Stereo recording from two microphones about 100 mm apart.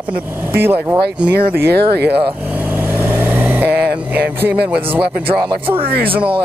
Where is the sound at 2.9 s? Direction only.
20° right (ahead or behind).